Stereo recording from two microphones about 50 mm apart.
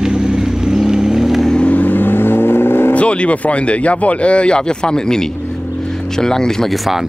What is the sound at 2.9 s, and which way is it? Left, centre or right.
Speech, left.